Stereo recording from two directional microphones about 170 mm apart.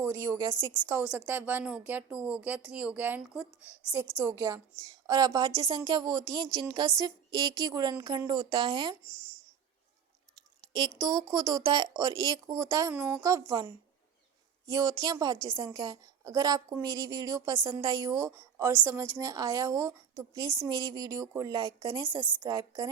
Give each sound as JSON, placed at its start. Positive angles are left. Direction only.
{"t": 0.0, "sound": "speech", "side_deg": -15}
{"t": 10.7, "sound": "speech", "side_deg": -25}